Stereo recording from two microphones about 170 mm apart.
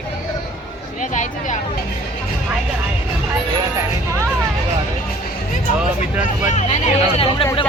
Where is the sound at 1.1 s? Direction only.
45° left (ahead or behind).